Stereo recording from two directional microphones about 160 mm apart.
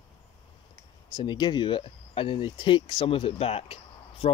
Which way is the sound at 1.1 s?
25° left (ahead or behind).